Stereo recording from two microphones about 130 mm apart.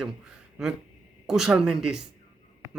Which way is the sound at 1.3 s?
5° right (ahead or behind).